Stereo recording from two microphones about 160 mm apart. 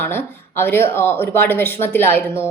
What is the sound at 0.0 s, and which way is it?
Speech, 15° left (ahead or behind).